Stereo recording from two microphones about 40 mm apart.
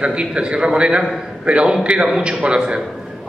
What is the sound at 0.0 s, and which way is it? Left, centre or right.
A man's voice, right.